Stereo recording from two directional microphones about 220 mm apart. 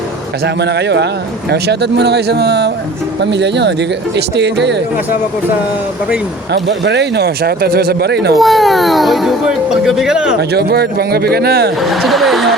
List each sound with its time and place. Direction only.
0.4 s speech: 50° right (ahead or behind)
6.5 s speech: 50° right (ahead or behind)
8.4 s speech: centre (ahead or behind)
10.5 s speech: 45° right (ahead or behind)
11.8 s speech: centre (ahead or behind)